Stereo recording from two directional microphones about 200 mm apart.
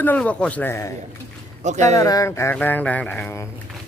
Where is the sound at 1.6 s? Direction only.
35° right (ahead or behind).